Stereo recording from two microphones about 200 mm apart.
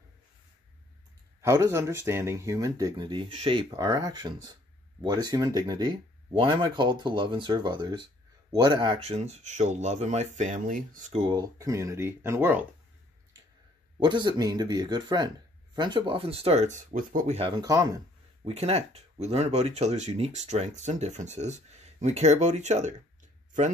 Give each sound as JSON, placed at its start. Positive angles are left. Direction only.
{"t": 1.4, "sound": "speech", "side_deg": -15}
{"t": 11.2, "sound": "speech", "side_deg": -20}
{"t": 13.9, "sound": "speech", "side_deg": -20}
{"t": 17.4, "sound": "speech", "side_deg": -20}
{"t": 18.4, "sound": "speech", "side_deg": -30}